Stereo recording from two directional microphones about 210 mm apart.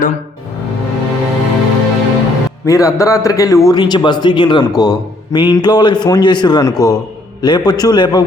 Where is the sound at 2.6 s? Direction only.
15° left (ahead or behind).